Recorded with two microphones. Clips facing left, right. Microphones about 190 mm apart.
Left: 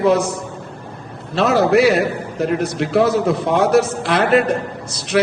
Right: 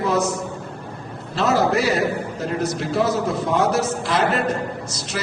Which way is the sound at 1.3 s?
65° left (ahead or behind).